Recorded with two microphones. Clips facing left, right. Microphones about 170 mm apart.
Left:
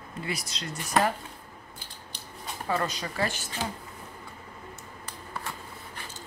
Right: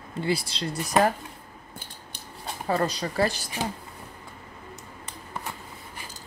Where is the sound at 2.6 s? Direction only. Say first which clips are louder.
Right 4 dB; 35° right (ahead or behind).